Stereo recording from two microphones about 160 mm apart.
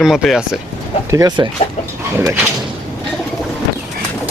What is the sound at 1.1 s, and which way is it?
Speech, 20° right (ahead or behind).